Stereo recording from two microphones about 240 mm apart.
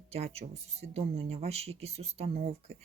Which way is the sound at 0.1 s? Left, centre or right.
Right.